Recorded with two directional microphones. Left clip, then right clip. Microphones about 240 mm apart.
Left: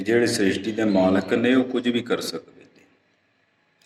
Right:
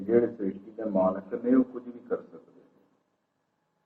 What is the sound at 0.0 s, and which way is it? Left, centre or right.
A man's voice, left.